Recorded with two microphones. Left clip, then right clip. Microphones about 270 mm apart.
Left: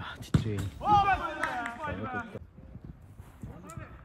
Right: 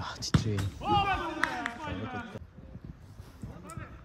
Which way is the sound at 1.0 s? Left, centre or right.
Centre.